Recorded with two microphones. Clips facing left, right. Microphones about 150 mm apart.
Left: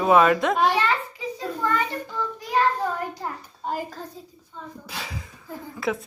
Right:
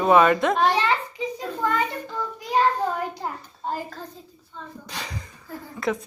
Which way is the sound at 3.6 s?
10° left (ahead or behind).